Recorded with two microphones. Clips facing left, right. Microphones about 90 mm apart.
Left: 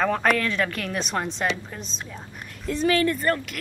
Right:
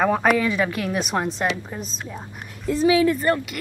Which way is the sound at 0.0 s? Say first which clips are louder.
Right 3 dB; 10° right (ahead or behind).